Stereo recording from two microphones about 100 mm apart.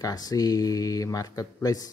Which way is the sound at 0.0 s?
40° left (ahead or behind).